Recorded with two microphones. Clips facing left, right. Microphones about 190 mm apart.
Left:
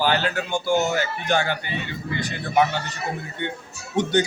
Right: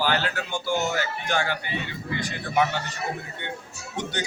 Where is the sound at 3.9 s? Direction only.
25° left (ahead or behind).